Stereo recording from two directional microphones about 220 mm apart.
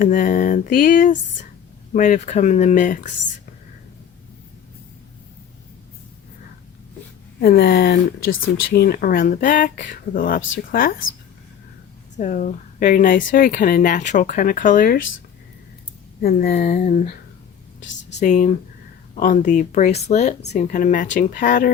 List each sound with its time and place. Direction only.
0.0 s speech: 35° left (ahead or behind)
7.3 s speech: 45° left (ahead or behind)
12.1 s speech: 35° left (ahead or behind)
16.2 s speech: 40° left (ahead or behind)
18.2 s speech: 35° left (ahead or behind)